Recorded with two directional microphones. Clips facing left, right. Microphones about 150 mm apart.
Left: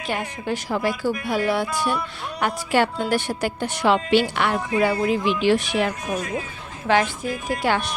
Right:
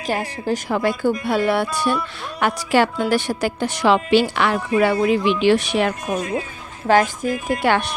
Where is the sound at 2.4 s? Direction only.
90° right; by 5.9 s 70° right (ahead or behind).